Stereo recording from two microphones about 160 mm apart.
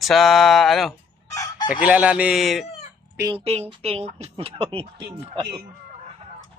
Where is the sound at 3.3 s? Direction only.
40° right (ahead or behind).